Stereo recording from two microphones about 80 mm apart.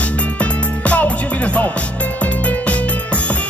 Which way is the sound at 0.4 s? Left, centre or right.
Centre.